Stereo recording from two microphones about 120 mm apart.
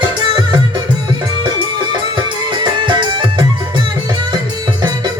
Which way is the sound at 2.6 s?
40° right (ahead or behind).